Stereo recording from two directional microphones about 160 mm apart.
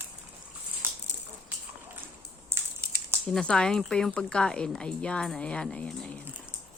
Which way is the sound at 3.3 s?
5° left (ahead or behind).